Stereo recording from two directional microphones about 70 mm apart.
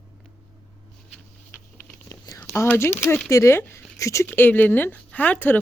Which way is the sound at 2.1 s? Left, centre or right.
Left.